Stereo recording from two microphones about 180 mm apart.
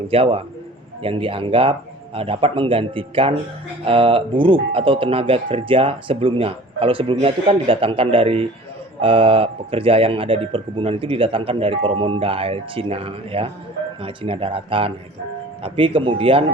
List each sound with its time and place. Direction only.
0.1 s speech: 30° right (ahead or behind)